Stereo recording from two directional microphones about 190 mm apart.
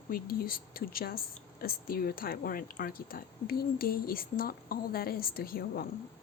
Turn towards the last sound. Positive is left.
turn(degrees=50)  # may be behind; listen again after turning